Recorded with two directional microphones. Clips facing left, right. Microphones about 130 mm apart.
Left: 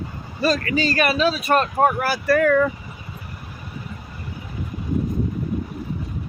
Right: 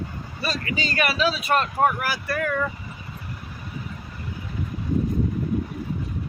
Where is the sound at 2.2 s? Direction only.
55° left (ahead or behind).